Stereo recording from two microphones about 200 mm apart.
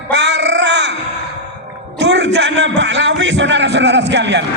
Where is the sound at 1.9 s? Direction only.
60° right (ahead or behind).